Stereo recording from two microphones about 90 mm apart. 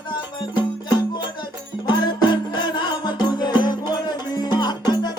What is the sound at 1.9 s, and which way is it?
Music, 55° left (ahead or behind).